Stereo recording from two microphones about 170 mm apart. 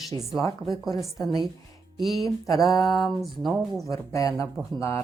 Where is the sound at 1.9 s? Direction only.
Centre (ahead or behind).